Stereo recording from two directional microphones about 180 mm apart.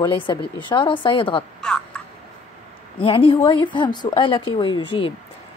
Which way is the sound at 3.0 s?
30° left (ahead or behind).